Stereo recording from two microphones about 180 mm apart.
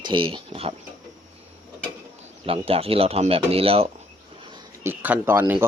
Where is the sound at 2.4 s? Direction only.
30° right (ahead or behind).